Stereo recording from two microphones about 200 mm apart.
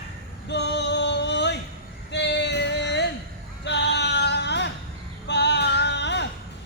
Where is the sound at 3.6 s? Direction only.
60° left (ahead or behind).